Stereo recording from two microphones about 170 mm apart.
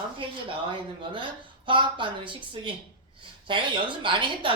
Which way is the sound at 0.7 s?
30° right (ahead or behind).